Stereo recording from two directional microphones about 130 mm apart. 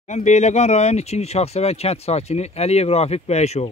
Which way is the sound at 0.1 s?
60° left (ahead or behind).